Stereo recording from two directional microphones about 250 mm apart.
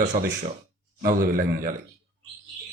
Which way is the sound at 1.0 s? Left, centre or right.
Right.